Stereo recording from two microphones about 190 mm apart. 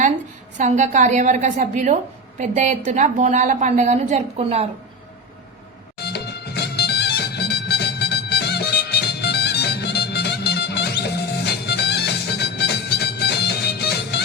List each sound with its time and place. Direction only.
0.5 s a woman's voice: 40° right (ahead or behind)
6.0 s music: 60° left (ahead or behind)